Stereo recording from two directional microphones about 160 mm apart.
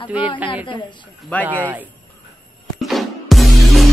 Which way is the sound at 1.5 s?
10° right (ahead or behind).